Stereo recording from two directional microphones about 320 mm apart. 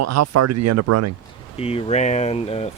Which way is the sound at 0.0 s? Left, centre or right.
Right.